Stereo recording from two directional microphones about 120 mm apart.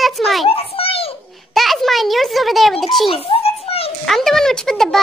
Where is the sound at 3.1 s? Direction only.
50° left (ahead or behind).